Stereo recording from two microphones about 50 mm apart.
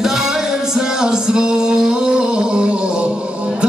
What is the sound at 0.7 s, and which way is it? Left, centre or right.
Music, centre.